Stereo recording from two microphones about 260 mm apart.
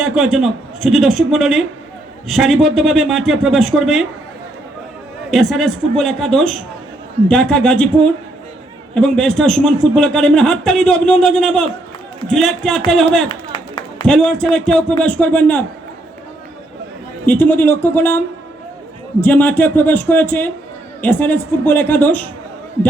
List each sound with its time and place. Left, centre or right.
0.0 s a man's voice: centre
5.3 s a man's voice: centre
13.2 s clapping: centre
14.0 s a man's voice: centre
17.2 s speech: centre
19.2 s speech: centre